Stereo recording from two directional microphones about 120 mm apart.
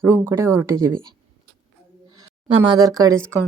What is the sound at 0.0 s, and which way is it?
Speech, 20° right (ahead or behind).